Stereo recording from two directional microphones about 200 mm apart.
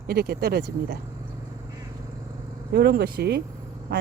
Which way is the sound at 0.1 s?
50° right (ahead or behind).